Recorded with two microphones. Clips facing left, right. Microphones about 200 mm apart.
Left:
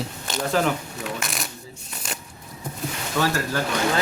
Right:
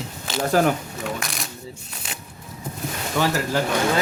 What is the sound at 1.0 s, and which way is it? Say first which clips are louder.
Speech: right 1 dB; centre (ahead or behind).